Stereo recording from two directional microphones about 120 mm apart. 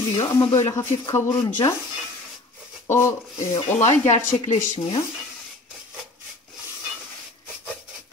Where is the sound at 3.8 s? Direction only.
85° left.